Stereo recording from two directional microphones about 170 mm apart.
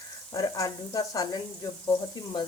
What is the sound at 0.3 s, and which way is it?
Speech, 20° left (ahead or behind).